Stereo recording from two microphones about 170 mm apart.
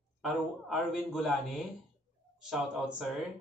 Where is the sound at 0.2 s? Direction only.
Centre (ahead or behind).